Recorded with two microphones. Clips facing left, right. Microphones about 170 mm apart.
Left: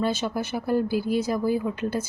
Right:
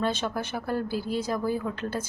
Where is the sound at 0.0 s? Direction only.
10° left (ahead or behind).